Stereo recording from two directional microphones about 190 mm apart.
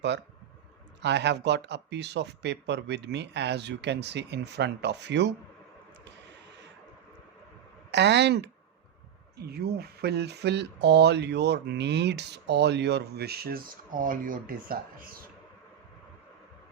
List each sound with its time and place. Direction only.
1.0 s speech: 65° right (ahead or behind)
7.9 s speech: 65° right (ahead or behind); by 15.2 s 50° right (ahead or behind)